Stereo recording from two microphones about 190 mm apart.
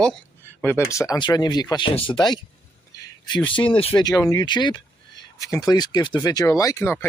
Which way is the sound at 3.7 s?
25° left (ahead or behind).